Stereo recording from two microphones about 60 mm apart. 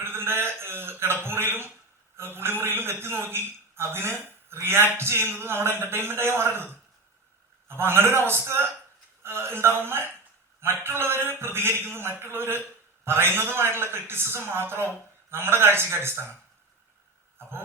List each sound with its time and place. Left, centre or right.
0.0 s a sound: right
4.6 s a man's voice: right
7.7 s a man's voice: right